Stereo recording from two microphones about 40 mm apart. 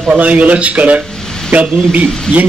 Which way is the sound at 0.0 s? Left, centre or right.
Right.